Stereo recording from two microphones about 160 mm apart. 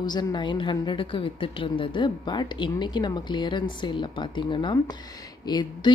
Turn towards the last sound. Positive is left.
turn(degrees=30)  # may be behind; listen again after turning